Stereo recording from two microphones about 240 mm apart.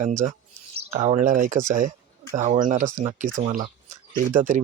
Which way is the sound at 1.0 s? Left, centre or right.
Right.